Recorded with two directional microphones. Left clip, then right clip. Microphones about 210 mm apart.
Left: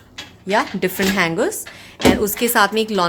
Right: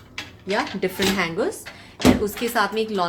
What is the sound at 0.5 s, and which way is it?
Speech, 40° left (ahead or behind).